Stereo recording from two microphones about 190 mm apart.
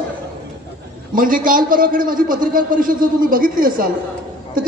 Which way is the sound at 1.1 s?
45° right (ahead or behind).